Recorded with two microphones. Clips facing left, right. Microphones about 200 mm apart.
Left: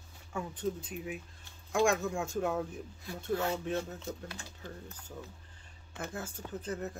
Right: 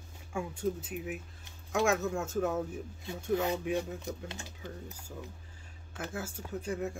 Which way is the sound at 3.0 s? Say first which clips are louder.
Right 2 dB; 20° right (ahead or behind).